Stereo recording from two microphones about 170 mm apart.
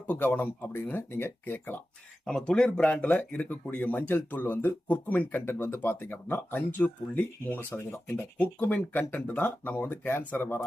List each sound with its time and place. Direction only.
0.1 s speech: 10° left (ahead or behind)